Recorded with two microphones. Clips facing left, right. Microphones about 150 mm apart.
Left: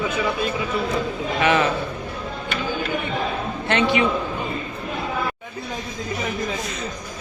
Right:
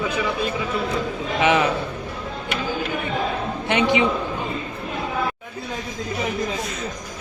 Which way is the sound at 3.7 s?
15° right (ahead or behind).